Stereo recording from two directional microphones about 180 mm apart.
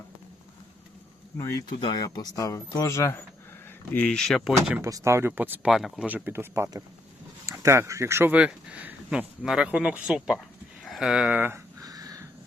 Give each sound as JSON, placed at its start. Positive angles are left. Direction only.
{"t": 1.4, "sound": "speech", "side_deg": 15}
{"t": 4.8, "sound": "speech", "side_deg": -20}
{"t": 10.8, "sound": "a sound", "side_deg": 0}